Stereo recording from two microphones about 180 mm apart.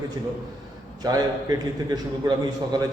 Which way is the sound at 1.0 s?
20° right (ahead or behind).